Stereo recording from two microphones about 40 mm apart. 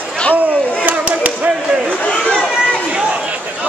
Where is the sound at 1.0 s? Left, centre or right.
Right.